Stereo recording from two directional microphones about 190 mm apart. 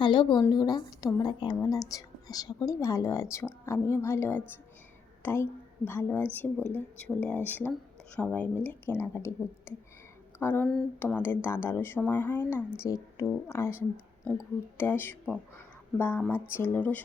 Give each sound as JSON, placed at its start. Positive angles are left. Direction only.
{"t": 0.0, "sound": "a woman's voice", "side_deg": 25}